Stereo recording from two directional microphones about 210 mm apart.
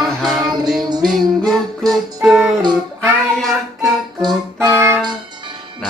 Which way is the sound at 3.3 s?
Centre (ahead or behind).